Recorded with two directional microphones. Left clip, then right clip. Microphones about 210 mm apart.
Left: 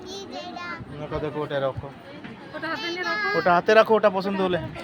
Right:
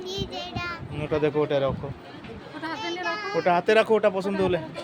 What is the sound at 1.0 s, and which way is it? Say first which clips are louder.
Speech: right 6 dB; 40° right (ahead or behind).